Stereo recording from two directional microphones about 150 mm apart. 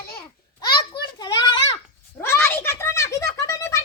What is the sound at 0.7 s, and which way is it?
Children playing, 30° left (ahead or behind).